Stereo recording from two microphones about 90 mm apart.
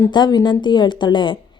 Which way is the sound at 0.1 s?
55° left (ahead or behind).